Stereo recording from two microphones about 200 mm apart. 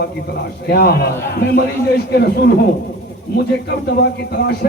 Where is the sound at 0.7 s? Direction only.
50° left (ahead or behind).